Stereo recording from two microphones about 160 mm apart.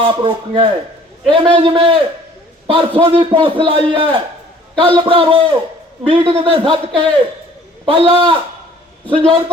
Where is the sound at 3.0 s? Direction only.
30° right (ahead or behind).